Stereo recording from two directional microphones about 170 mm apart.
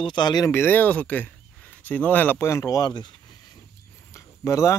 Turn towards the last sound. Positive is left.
turn(degrees=15)  # may be behind; listen again after turning